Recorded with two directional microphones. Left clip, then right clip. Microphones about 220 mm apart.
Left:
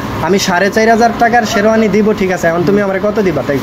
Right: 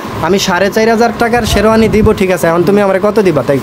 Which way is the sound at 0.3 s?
35° right (ahead or behind).